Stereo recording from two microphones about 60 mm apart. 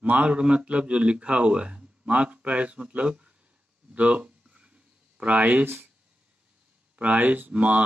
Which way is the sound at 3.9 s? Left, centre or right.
Right.